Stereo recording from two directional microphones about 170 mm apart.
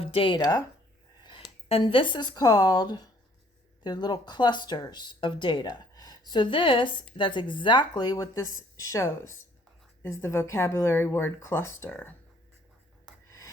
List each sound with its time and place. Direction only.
0.0 s speech: 30° left (ahead or behind); by 12.1 s 10° left (ahead or behind)